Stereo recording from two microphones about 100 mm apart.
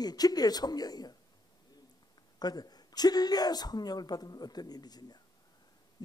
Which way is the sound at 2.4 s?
40° left (ahead or behind).